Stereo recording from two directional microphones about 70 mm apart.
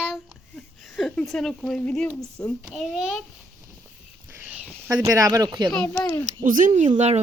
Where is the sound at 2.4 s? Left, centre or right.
Left.